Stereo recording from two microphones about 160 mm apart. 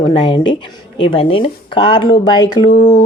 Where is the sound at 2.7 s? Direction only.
50° left (ahead or behind).